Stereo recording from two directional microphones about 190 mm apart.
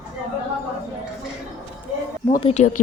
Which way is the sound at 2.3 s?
35° left (ahead or behind).